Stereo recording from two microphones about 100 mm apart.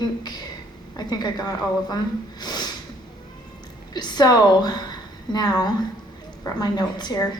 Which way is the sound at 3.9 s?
45° left (ahead or behind).